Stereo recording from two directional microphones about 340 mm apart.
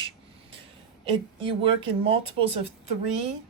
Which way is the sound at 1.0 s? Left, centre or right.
Centre.